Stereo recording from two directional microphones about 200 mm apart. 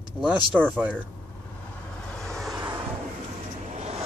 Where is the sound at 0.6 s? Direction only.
10° right (ahead or behind).